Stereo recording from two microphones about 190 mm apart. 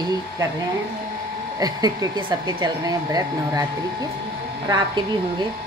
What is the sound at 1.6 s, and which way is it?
Speech, 20° right (ahead or behind).